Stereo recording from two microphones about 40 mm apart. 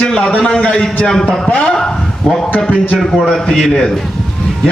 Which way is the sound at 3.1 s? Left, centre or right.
Centre.